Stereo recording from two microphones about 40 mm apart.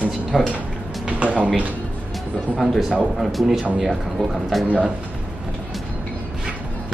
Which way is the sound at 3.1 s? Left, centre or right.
Centre.